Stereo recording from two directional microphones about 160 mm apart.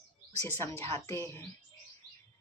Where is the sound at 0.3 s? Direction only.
15° left (ahead or behind).